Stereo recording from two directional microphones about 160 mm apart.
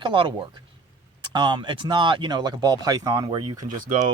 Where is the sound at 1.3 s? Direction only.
30° right (ahead or behind).